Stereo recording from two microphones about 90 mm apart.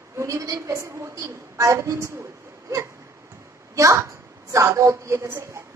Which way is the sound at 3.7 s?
35° right (ahead or behind).